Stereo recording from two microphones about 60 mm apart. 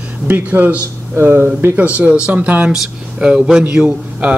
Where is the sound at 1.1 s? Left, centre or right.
Right.